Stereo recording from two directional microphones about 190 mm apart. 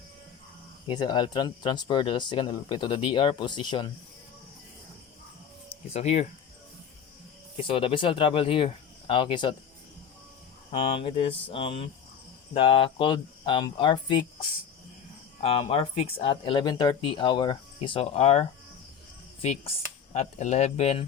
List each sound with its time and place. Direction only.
0.9 s speech: 25° left (ahead or behind)
5.9 s speech: 35° left (ahead or behind)
7.7 s speech: 30° left (ahead or behind)
10.7 s speech: 30° left (ahead or behind)
15.4 s speech: 30° left (ahead or behind)